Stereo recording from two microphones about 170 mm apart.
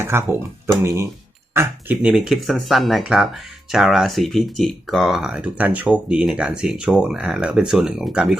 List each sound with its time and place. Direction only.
0.0 s speech: 15° right (ahead or behind)